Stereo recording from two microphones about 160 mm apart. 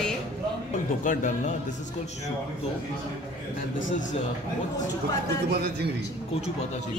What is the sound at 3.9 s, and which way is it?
Speech, 55° left (ahead or behind).